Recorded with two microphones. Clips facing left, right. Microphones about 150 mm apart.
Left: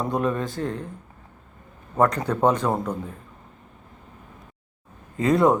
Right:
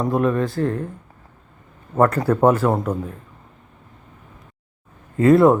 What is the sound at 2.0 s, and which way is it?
Speech, 5° right (ahead or behind).